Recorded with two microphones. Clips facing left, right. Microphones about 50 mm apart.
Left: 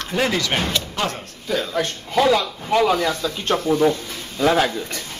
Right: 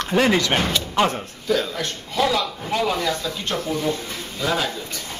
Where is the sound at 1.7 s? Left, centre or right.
Left.